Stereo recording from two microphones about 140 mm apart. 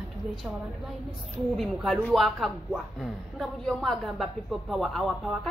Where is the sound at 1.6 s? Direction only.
Centre (ahead or behind).